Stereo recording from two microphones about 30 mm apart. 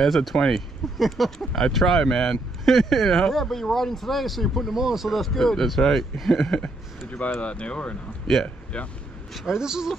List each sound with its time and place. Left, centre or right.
0.0 s speech: centre
4.7 s speech: centre
5.1 s speech: centre
7.3 s speech: left
8.3 s speech: centre
8.7 s speech: left
9.5 s speech: centre